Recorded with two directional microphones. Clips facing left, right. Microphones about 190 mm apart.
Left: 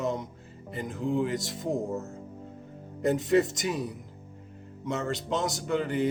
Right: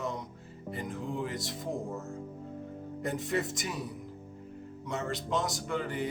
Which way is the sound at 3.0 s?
25° left (ahead or behind).